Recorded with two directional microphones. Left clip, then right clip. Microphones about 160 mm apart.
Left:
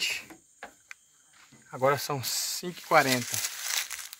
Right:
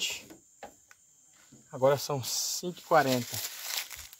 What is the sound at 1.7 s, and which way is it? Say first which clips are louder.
Speech: even; 10° left (ahead or behind).